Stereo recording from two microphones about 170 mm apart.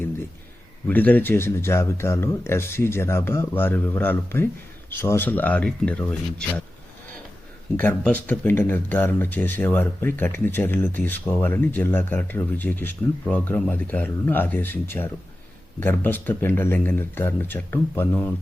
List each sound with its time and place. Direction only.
0.9 s speech: 10° left (ahead or behind)
7.8 s speech: 10° left (ahead or behind)